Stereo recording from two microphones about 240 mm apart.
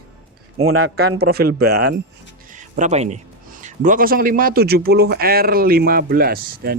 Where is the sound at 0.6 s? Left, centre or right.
Right.